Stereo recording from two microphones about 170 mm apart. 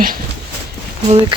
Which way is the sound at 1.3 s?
30° right (ahead or behind).